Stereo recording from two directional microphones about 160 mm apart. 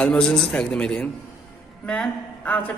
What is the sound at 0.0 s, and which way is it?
A woman's voice, 5° left (ahead or behind).